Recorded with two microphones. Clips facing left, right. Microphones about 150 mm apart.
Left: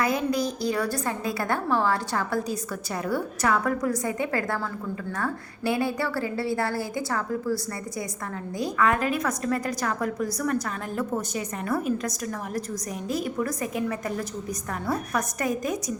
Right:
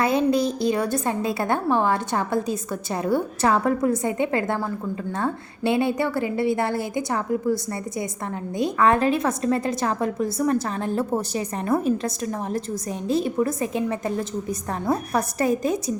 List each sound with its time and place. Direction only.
0.0 s a woman's voice: 25° right (ahead or behind)